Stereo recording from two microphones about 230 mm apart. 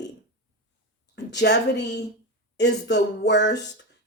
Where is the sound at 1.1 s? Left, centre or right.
Left.